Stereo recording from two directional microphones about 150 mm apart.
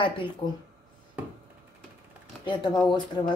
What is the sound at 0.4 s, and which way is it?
Speech, 45° left (ahead or behind).